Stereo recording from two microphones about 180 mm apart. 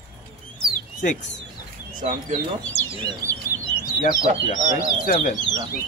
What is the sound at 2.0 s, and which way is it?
Speech, 45° right (ahead or behind).